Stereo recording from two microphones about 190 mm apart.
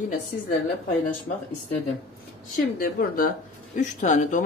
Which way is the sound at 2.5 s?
50° left (ahead or behind).